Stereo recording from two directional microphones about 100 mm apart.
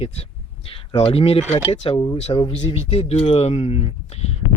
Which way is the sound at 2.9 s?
80° left.